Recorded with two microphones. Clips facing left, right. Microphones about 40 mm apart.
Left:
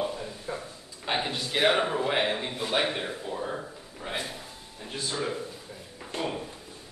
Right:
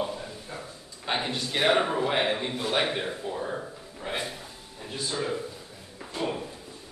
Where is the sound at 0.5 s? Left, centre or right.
Left.